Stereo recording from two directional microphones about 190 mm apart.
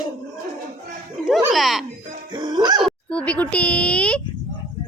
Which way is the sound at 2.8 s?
5° left (ahead or behind).